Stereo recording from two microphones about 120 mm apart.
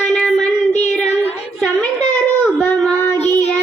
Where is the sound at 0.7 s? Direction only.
70° left (ahead or behind).